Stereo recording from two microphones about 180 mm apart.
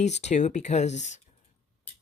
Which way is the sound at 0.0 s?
40° left (ahead or behind).